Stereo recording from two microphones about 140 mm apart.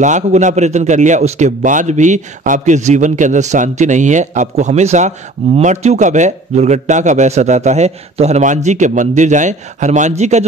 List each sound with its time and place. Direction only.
0.0 s a man's voice: 60° right (ahead or behind)